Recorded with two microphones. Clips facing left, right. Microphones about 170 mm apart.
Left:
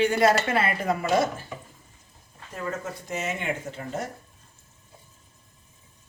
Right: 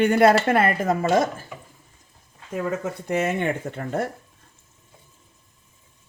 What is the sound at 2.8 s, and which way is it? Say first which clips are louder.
Speech: right 7 dB; 60° right (ahead or behind).